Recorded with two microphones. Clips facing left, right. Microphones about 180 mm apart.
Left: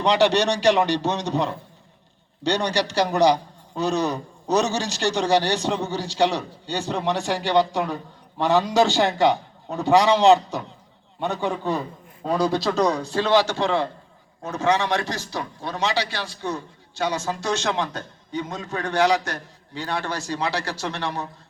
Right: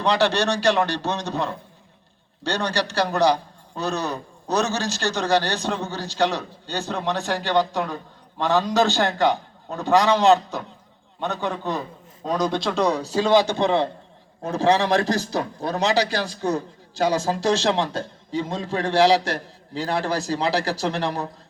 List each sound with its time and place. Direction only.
0.0 s a man's voice: 15° left (ahead or behind)
13.1 s a man's voice: 15° right (ahead or behind)
14.5 s a man's voice: 35° right (ahead or behind)